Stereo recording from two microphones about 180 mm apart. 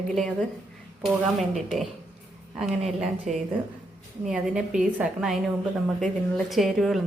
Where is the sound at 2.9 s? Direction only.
Centre (ahead or behind).